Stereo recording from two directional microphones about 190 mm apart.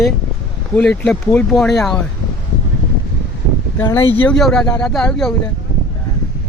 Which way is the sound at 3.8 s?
10° left (ahead or behind).